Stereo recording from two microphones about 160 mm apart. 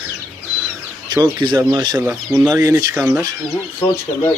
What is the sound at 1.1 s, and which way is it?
Speech, 25° right (ahead or behind).